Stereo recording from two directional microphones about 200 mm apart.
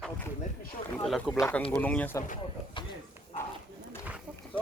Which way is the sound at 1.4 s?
10° left (ahead or behind).